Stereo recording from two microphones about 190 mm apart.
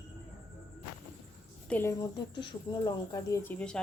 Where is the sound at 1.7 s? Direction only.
15° left (ahead or behind).